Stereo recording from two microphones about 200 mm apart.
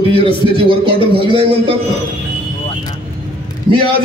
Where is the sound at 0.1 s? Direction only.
25° right (ahead or behind).